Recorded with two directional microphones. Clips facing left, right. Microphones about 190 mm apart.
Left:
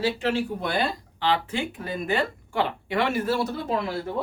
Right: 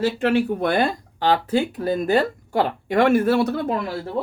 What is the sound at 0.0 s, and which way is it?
Speech, 55° right (ahead or behind).